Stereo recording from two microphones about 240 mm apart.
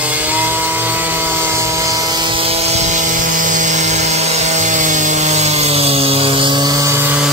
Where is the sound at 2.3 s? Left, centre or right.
Right.